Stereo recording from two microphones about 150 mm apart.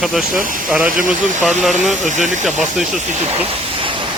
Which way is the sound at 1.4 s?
Centre (ahead or behind).